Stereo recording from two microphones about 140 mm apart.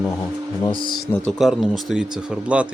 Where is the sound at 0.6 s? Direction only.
35° left (ahead or behind).